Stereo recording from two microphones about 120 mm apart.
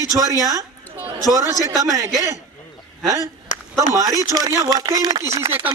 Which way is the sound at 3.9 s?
30° right (ahead or behind).